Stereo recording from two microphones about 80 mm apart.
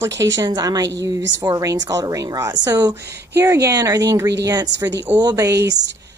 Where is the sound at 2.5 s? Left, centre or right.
Right.